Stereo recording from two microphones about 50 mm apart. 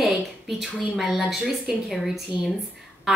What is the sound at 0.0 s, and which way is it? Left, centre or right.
A woman's voice, centre.